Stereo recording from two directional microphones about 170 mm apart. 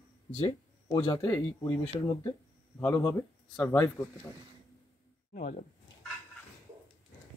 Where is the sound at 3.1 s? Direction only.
15° left (ahead or behind).